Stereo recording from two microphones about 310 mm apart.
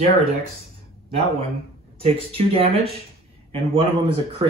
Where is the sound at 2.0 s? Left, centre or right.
Centre.